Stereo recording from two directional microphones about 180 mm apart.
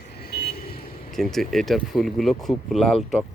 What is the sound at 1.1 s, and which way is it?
Speech, centre (ahead or behind).